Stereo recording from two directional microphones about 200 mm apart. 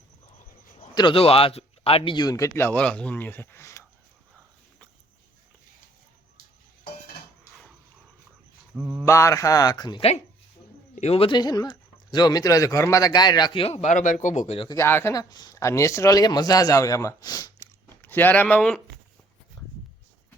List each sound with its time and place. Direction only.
0.9 s speech: 25° left (ahead or behind)
8.7 s mantra: 5° right (ahead or behind)
9.0 s speech: 15° left (ahead or behind)
14.8 s speech: 10° left (ahead or behind)
19.6 s a sound: 20° left (ahead or behind)